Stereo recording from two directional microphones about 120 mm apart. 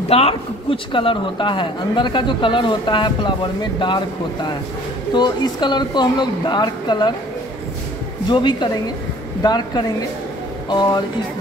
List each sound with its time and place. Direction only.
0.1 s speech: 55° left (ahead or behind); by 7.2 s 35° left (ahead or behind)
8.3 s speech: 40° left (ahead or behind)